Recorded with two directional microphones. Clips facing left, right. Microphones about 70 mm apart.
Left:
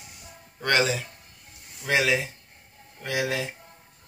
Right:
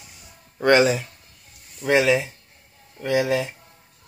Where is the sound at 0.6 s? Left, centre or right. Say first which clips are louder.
Right 7 dB; right.